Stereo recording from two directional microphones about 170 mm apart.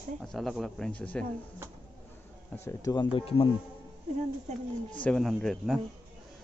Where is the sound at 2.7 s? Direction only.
20° left (ahead or behind).